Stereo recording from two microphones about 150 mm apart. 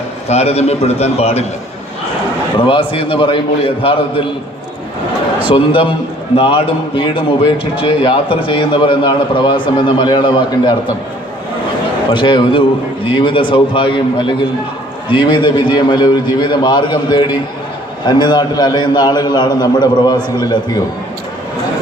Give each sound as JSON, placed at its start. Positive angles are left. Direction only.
{"t": 0.3, "sound": "a man's voice", "side_deg": 45}
{"t": 2.6, "sound": "a man's voice", "side_deg": 35}
{"t": 5.5, "sound": "a man's voice", "side_deg": 35}
{"t": 12.1, "sound": "a man's voice", "side_deg": 35}